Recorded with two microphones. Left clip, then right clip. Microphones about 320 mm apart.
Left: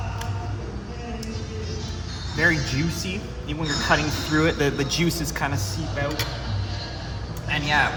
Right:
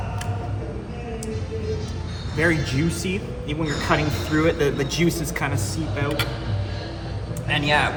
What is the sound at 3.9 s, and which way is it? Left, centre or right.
Speech, centre.